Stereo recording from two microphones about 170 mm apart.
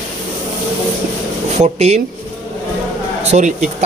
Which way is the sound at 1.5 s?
40° right (ahead or behind).